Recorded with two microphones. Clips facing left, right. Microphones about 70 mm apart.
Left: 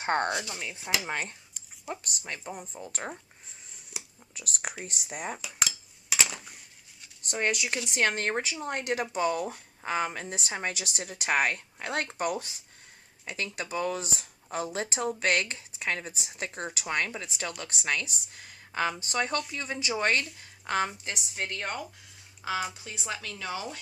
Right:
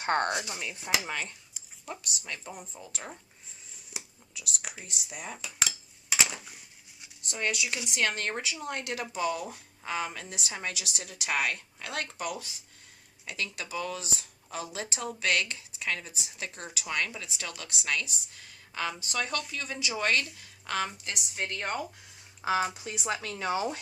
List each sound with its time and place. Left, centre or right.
0.0 s speech: left
0.3 s speech: right
1.0 s speech: left
4.4 s speech: left
5.4 s dishes: centre
7.3 s a woman's voice: left
13.2 s a woman's voice: left
21.3 s speech: centre
22.4 s speech: right